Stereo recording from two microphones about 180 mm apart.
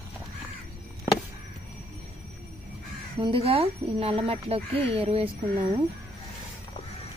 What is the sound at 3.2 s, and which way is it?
Speech, 30° right (ahead or behind).